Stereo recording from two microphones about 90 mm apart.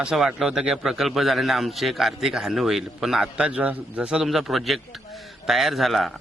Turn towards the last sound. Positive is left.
turn(degrees=0)  # may be behind; listen again after turning